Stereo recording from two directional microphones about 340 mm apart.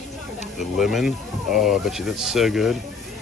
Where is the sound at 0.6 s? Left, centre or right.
Centre.